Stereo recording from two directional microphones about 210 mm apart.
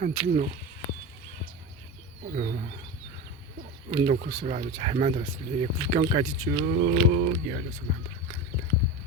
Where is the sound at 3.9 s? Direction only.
35° right (ahead or behind).